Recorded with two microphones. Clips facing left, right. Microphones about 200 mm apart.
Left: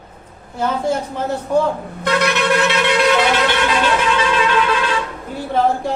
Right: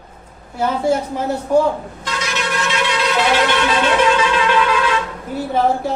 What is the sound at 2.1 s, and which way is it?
Wind instrument, 60° left (ahead or behind).